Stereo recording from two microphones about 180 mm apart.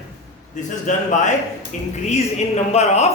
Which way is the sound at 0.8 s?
45° left (ahead or behind).